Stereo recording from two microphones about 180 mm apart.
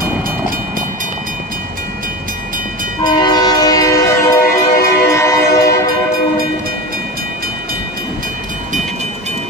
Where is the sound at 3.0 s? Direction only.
25° left (ahead or behind).